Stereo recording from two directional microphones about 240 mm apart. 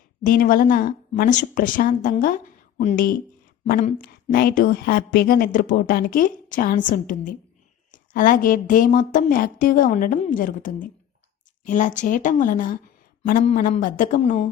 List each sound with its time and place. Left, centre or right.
0.3 s a woman's voice: left